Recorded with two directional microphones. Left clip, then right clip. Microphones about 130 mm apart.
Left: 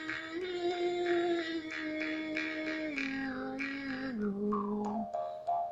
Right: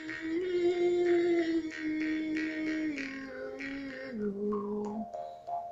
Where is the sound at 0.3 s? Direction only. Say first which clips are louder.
Right 7 dB; 45° right (ahead or behind).